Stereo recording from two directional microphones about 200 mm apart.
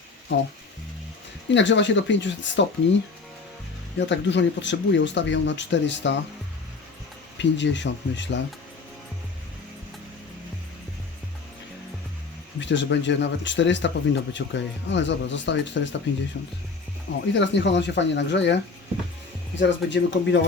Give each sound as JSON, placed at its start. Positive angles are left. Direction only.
{"t": 1.5, "sound": "speech", "side_deg": 65}
{"t": 7.3, "sound": "speech", "side_deg": 65}
{"t": 12.5, "sound": "speech", "side_deg": 65}
{"t": 17.3, "sound": "speech", "side_deg": 65}
{"t": 19.5, "sound": "speech", "side_deg": 65}